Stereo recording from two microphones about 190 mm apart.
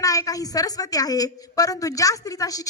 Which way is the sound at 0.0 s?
20° left (ahead or behind).